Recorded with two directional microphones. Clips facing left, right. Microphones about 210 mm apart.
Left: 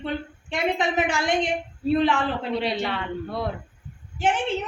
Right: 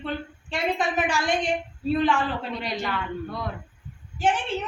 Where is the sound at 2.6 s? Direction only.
30° left (ahead or behind).